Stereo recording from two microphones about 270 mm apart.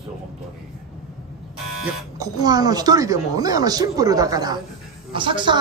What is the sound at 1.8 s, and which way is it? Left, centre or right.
Speech, centre.